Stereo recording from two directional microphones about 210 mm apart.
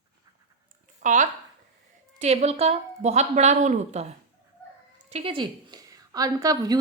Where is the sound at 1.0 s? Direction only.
35° right (ahead or behind).